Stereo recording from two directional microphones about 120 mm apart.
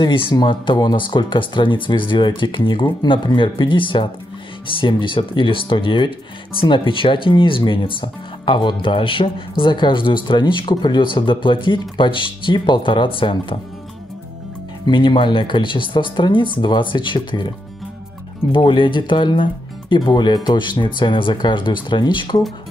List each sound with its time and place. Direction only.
0.0 s speech: 40° left (ahead or behind)
14.9 s speech: 45° left (ahead or behind)
18.5 s speech: 45° left (ahead or behind)